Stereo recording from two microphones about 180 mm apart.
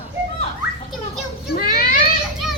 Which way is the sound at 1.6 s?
55° left (ahead or behind).